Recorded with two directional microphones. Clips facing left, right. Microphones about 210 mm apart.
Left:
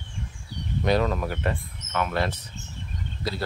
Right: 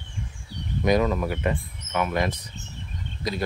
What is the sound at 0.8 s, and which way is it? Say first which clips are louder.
Speech: right 2 dB; 10° right (ahead or behind).